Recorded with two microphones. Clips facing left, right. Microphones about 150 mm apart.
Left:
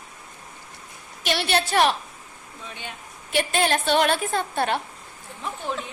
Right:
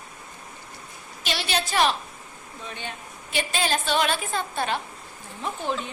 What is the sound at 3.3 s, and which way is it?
A woman's voice, 60° left (ahead or behind).